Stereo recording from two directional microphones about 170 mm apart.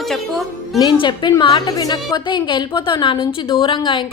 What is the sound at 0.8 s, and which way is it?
A woman's voice, 25° left (ahead or behind).